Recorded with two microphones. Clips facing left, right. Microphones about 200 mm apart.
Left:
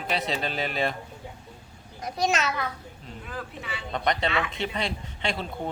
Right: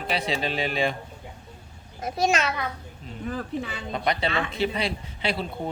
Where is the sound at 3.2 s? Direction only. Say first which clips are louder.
Right 9 dB; 45° right (ahead or behind).